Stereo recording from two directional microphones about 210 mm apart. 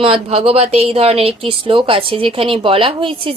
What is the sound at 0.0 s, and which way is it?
Speech, 25° right (ahead or behind).